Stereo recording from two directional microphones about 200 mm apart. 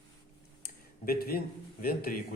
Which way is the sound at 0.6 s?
50° left (ahead or behind).